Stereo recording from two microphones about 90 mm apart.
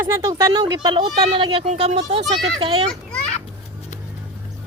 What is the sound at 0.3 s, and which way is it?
Speech, 35° right (ahead or behind).